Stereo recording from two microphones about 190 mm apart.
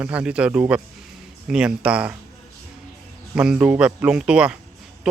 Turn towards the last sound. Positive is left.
turn(degrees=-5)  # may be behind; listen again after turning